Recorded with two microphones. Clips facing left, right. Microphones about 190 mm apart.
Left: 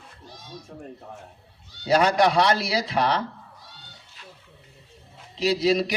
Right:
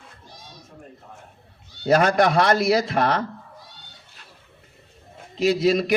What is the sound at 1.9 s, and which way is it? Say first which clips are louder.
A man's voice: right 2 dB; 50° right (ahead or behind).